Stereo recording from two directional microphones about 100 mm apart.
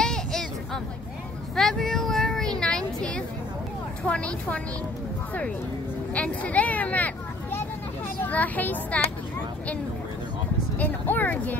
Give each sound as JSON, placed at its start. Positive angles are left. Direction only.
{"t": 0.0, "sound": "a sound", "side_deg": 5}
{"t": 1.5, "sound": "a sound", "side_deg": 5}
{"t": 4.0, "sound": "a child's voice", "side_deg": 10}
{"t": 6.1, "sound": "speech", "side_deg": 15}
{"t": 8.2, "sound": "a child's voice", "side_deg": 15}
{"t": 10.8, "sound": "a child's voice", "side_deg": 15}